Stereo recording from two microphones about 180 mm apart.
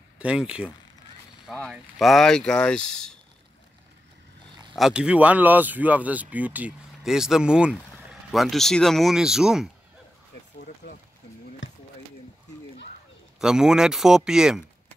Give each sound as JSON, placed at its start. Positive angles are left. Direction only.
{"t": 0.2, "sound": "speech", "side_deg": -5}
{"t": 4.7, "sound": "speech", "side_deg": -5}
{"t": 10.8, "sound": "a sound", "side_deg": 65}
{"t": 13.4, "sound": "speech", "side_deg": -5}